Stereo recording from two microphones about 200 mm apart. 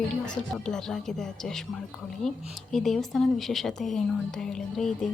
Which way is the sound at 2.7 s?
Centre (ahead or behind).